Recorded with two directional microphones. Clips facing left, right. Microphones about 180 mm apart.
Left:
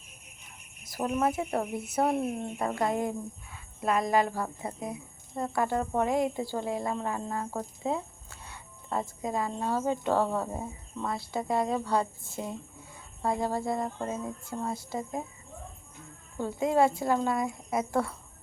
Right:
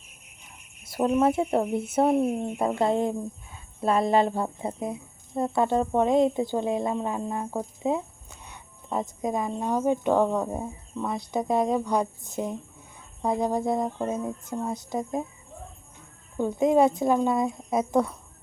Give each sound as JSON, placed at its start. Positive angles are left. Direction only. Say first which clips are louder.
{"t": 0.9, "sound": "a woman's voice", "louder": "right 6 dB", "side_deg": -25}
{"t": 16.4, "sound": "speech", "louder": "right 5 dB", "side_deg": -20}